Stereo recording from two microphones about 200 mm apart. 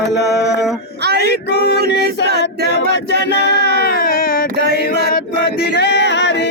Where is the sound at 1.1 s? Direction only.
55° left (ahead or behind).